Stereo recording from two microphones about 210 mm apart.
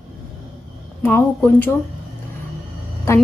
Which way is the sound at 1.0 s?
10° left (ahead or behind).